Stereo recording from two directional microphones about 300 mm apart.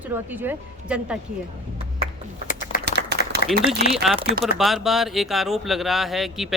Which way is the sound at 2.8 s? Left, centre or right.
Right.